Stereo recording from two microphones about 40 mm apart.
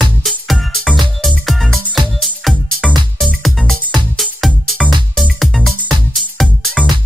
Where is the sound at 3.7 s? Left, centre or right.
Centre.